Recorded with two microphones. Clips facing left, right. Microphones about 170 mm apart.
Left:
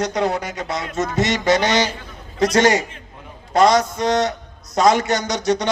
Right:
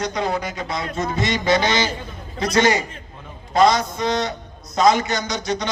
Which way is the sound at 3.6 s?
70° left (ahead or behind).